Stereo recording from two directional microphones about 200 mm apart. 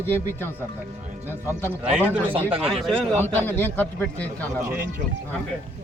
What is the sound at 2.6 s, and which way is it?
A man's voice, centre (ahead or behind).